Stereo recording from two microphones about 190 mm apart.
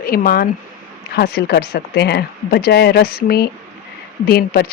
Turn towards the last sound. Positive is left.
turn(degrees=55)  # may be behind; listen again after turning